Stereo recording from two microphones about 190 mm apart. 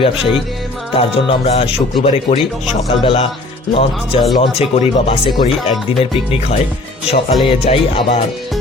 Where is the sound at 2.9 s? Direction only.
30° left (ahead or behind).